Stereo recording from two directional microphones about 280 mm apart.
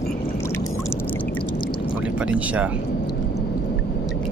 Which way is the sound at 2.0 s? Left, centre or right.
Centre.